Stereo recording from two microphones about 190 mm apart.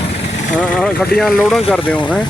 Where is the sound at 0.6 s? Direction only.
5° left (ahead or behind).